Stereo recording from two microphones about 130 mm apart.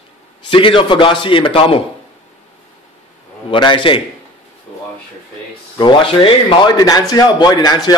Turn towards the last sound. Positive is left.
turn(degrees=30)  # may be behind; listen again after turning